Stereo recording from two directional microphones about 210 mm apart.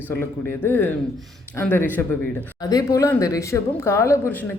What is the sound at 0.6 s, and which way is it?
Speech, 10° left (ahead or behind).